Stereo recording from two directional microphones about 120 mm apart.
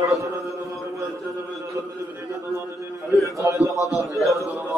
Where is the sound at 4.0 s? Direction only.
Centre (ahead or behind).